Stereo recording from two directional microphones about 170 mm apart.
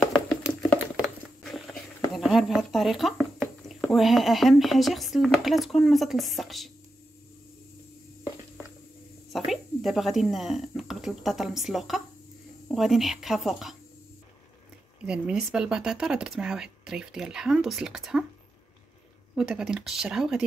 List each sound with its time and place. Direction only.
0.0 s a sound: centre (ahead or behind)
1.4 s speech: centre (ahead or behind)
9.3 s speech: centre (ahead or behind)
15.0 s speech: 5° right (ahead or behind)
19.3 s speech: 5° right (ahead or behind)